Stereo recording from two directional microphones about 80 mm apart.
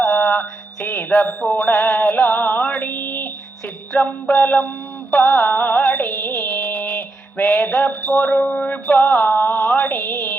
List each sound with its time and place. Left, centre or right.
0.0 s music: centre